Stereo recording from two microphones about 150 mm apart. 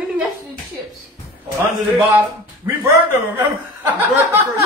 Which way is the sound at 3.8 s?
10° right (ahead or behind).